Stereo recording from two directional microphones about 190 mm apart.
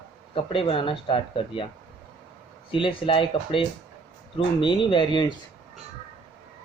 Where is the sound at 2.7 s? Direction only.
25° left (ahead or behind).